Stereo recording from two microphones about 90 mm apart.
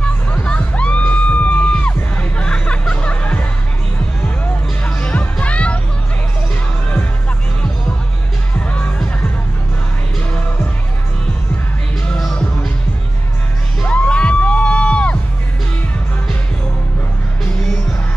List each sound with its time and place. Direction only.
0.0 s music: 15° left (ahead or behind)
4.8 s music: 15° left (ahead or behind)
8.5 s music: 15° left (ahead or behind)
12.1 s music: 10° left (ahead or behind)
13.8 s music: 15° left (ahead or behind)